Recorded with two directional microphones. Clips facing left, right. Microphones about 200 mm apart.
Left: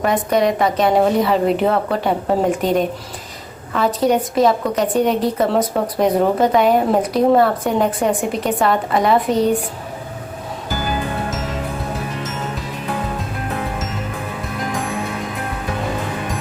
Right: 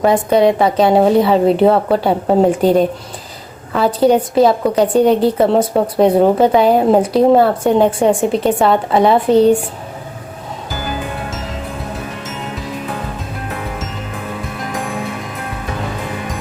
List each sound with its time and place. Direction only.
0.0 s a woman's voice: 30° right (ahead or behind)